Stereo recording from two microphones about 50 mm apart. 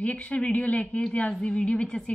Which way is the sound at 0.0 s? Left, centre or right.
Left.